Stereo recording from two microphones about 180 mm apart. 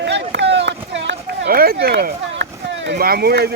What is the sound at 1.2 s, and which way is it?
Speech, 60° right (ahead or behind).